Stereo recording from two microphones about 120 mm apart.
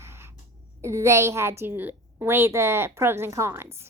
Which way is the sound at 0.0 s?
20° right (ahead or behind).